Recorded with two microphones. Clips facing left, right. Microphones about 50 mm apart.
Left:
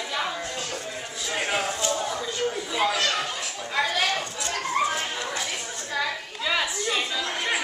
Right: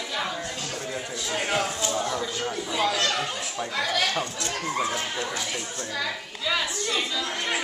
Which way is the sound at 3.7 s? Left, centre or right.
Centre.